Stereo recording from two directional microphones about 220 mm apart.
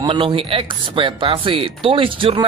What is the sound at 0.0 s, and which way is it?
Speech, 20° right (ahead or behind).